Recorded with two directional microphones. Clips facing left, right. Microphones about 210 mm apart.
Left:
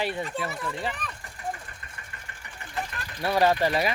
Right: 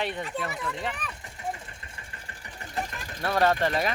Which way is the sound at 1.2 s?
20° right (ahead or behind).